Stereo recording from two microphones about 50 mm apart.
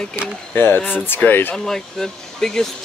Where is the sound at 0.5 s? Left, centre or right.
Left.